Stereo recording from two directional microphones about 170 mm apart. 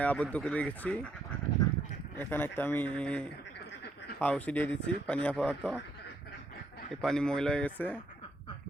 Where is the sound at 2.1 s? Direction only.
10° left (ahead or behind).